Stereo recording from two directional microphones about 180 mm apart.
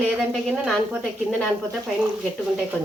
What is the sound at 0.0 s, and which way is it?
A woman's voice, 5° left (ahead or behind).